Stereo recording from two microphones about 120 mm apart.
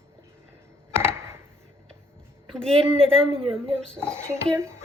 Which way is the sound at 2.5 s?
5° left (ahead or behind).